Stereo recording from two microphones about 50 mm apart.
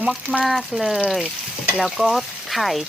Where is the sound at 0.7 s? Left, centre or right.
Centre.